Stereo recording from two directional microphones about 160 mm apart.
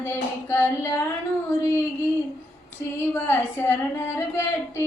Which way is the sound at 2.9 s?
15° left (ahead or behind).